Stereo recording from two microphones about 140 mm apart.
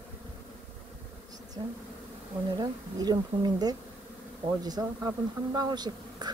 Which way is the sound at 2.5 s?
30° right (ahead or behind).